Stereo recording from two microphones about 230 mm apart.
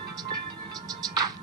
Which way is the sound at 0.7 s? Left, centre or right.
Centre.